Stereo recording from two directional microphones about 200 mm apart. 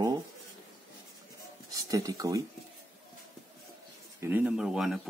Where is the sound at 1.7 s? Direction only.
15° right (ahead or behind).